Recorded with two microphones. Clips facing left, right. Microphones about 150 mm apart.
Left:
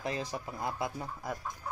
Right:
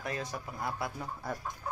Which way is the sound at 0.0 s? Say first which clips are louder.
Left 2 dB; 30° left (ahead or behind).